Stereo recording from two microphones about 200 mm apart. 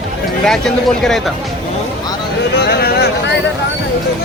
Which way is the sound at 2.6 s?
50° left (ahead or behind).